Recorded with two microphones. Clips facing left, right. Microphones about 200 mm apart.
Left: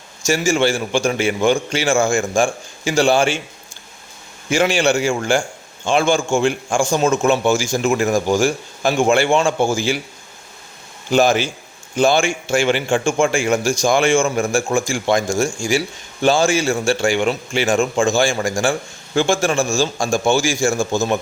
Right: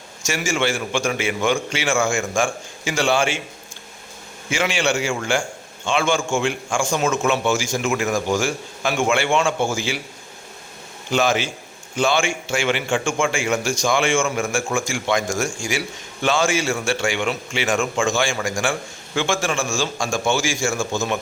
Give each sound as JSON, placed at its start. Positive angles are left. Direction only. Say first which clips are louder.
{"t": 0.3, "sound": "a man's voice", "louder": "left 6 dB", "side_deg": 35}
{"t": 4.4, "sound": "a man's voice", "louder": "left 5 dB", "side_deg": 40}
{"t": 11.1, "sound": "a man's voice", "louder": "left 5 dB", "side_deg": 40}